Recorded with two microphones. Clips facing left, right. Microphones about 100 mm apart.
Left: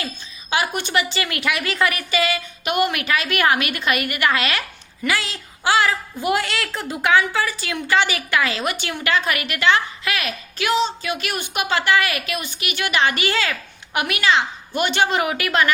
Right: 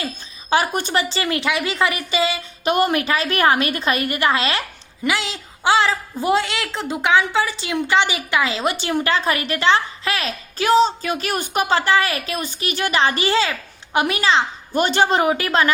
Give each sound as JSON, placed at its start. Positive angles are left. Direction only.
{"t": 0.5, "sound": "a woman's voice", "side_deg": -35}
{"t": 2.7, "sound": "a woman's voice", "side_deg": -35}
{"t": 8.7, "sound": "a woman's voice", "side_deg": -35}